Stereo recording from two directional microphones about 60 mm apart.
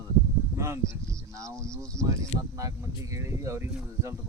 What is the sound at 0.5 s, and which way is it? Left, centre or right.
Speech, right.